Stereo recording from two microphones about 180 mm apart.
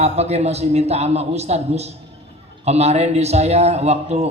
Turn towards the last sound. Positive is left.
turn(degrees=-35)  # may be behind; listen again after turning